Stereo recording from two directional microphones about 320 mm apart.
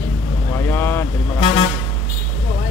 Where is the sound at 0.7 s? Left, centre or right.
Centre.